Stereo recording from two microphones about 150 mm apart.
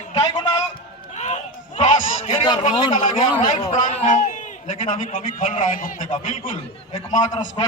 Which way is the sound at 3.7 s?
55° left (ahead or behind).